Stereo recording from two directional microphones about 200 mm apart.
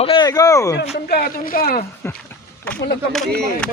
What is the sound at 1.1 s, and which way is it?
Speech, 50° left (ahead or behind).